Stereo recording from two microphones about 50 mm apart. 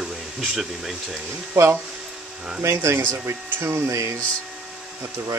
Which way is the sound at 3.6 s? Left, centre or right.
Right.